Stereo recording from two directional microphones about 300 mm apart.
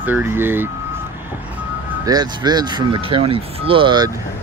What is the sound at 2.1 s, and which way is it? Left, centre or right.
Speech, centre.